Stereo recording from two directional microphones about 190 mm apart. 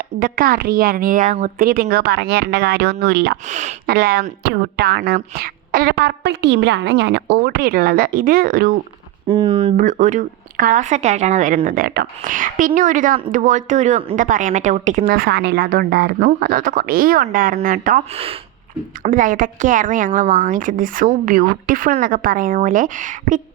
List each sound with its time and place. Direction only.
0.2 s a woman's voice: 50° right (ahead or behind)
3.5 s speech: 40° right (ahead or behind)
3.8 s speech: 55° right (ahead or behind)
9.2 s speech: 25° right (ahead or behind)
9.7 s a woman's voice: 40° right (ahead or behind)
19.0 s a woman's voice: 45° right (ahead or behind)